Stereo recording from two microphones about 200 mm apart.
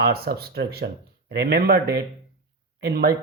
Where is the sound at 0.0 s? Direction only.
50° right (ahead or behind).